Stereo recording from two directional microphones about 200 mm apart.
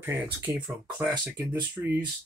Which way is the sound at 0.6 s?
5° right (ahead or behind).